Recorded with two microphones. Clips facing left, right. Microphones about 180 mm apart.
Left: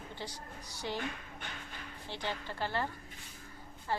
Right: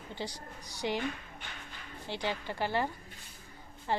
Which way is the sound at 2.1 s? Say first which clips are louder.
Right 4 dB; 15° right (ahead or behind).